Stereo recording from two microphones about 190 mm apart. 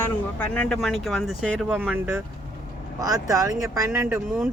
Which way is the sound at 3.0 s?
20° right (ahead or behind).